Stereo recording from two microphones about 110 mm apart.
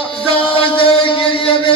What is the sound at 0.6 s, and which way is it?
Chant, 55° left (ahead or behind).